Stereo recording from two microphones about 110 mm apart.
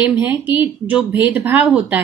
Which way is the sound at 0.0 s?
15° right (ahead or behind).